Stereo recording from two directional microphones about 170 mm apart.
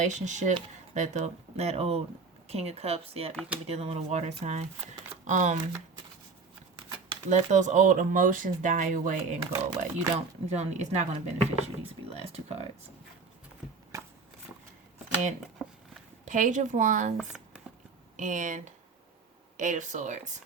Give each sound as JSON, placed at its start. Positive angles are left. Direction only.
{"t": 0.0, "sound": "speech", "side_deg": -45}
{"t": 7.3, "sound": "speech", "side_deg": -45}
{"t": 9.4, "sound": "speech", "side_deg": -20}
{"t": 10.2, "sound": "speech", "side_deg": -40}
{"t": 16.2, "sound": "speech", "side_deg": -50}
{"t": 17.2, "sound": "speech", "side_deg": -5}
{"t": 18.2, "sound": "speech", "side_deg": -50}